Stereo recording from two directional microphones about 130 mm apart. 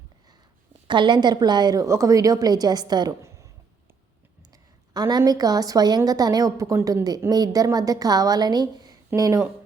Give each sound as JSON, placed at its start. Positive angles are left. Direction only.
{"t": 0.9, "sound": "a woman's voice", "side_deg": -35}
{"t": 4.5, "sound": "a woman's voice", "side_deg": -30}